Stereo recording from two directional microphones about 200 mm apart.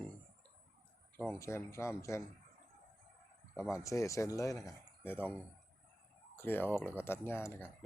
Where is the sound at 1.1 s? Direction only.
10° left (ahead or behind).